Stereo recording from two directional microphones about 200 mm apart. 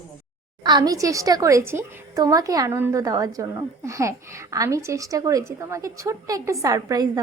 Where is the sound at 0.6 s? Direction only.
20° right (ahead or behind).